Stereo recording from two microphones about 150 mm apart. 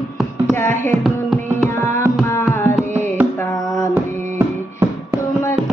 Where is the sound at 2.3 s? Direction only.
15° left (ahead or behind).